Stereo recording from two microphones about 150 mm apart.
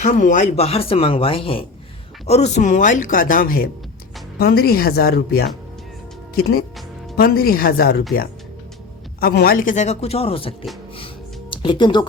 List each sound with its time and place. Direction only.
0.0 s speech: 55° left (ahead or behind)
4.4 s speech: 90° left
9.2 s speech: 85° left; by 12.0 s 30° left (ahead or behind)